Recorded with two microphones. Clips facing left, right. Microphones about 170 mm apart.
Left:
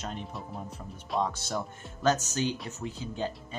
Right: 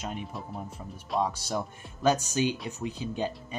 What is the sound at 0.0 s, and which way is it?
Speech, 10° right (ahead or behind).